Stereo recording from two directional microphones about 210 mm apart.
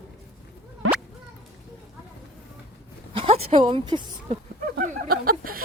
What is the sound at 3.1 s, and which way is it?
A woman's voice, 25° right (ahead or behind).